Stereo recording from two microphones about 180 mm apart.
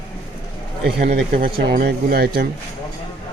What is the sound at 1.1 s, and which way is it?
Speech, 55° right (ahead or behind).